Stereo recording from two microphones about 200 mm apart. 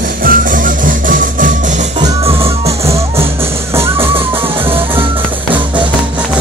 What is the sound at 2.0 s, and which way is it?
Music, 30° right (ahead or behind).